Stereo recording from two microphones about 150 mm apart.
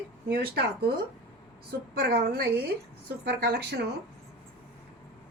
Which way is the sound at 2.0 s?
90° right.